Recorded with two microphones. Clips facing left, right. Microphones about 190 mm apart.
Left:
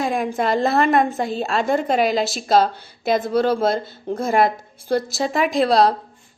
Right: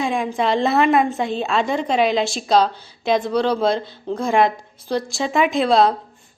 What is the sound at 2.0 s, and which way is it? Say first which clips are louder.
A woman's voice: even; 5° left (ahead or behind).